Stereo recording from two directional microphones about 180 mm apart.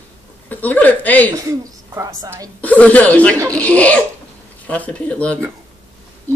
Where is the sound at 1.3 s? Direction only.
20° right (ahead or behind).